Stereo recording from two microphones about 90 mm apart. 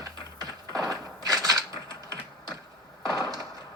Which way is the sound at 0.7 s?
40° right (ahead or behind).